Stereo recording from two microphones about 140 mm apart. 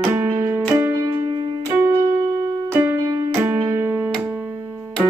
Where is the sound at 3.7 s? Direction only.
20° right (ahead or behind).